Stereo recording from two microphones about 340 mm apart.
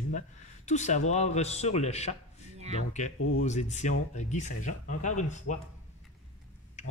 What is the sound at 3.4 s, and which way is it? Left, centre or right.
A man's voice, left.